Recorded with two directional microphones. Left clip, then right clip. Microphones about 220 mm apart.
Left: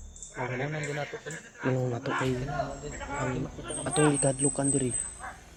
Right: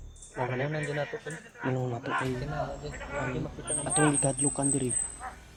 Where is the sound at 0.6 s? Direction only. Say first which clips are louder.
Right 1 dB; 50° right (ahead or behind).